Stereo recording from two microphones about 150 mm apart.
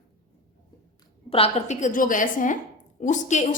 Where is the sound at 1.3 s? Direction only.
45° left (ahead or behind).